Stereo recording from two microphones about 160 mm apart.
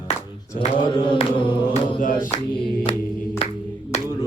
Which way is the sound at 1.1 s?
30° left (ahead or behind).